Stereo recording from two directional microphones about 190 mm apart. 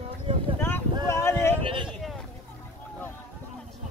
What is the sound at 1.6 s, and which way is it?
Speech, 25° right (ahead or behind).